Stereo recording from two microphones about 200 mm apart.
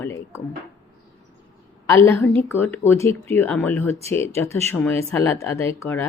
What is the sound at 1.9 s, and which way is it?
A woman's voice, 10° left (ahead or behind).